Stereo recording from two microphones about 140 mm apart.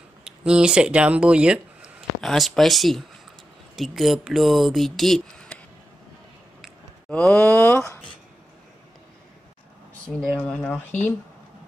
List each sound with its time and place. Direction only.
0.2 s speech: 5° right (ahead or behind)
6.6 s a sound: 5° left (ahead or behind)
7.3 s speech: 15° left (ahead or behind)
10.1 s speech: centre (ahead or behind)